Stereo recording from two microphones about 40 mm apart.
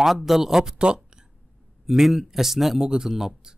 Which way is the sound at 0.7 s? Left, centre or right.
Right.